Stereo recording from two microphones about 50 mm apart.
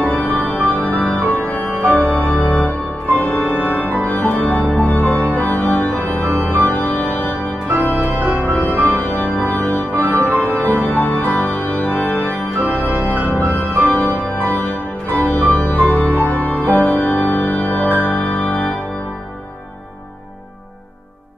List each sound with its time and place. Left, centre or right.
0.0 s music: left
4.1 s organ: left
6.2 s organ: right
6.5 s organ: left
8.3 s music: right
8.8 s organ: left
10.1 s music: left
10.9 s organ: left
13.1 s organ: right
13.8 s music: left